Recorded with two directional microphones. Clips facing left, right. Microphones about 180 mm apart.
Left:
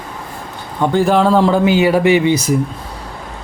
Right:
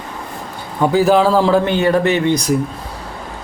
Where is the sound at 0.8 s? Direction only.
5° right (ahead or behind).